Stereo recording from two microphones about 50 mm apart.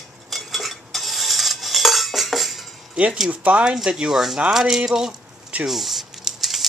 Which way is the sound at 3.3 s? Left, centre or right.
Right.